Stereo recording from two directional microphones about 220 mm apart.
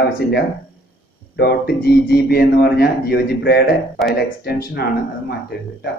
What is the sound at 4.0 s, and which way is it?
Speech, centre (ahead or behind).